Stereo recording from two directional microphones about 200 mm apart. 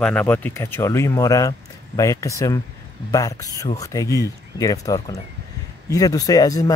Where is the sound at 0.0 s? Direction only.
5° left (ahead or behind).